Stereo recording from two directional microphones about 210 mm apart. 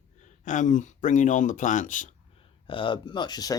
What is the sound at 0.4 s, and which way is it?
Speech, 35° left (ahead or behind).